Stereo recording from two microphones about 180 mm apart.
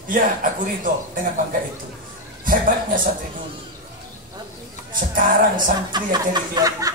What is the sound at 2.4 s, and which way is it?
Speech, 50° right (ahead or behind).